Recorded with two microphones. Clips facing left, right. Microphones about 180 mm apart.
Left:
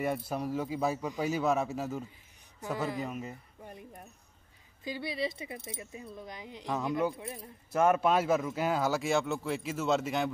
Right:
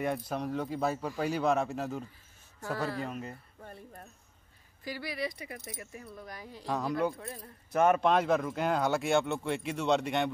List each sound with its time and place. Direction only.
0.0 s speech: 5° left (ahead or behind)
2.6 s speech: 15° left (ahead or behind)
3.1 s speech: 5° left (ahead or behind)
3.6 s speech: 15° left (ahead or behind)
7.0 s speech: 10° left (ahead or behind)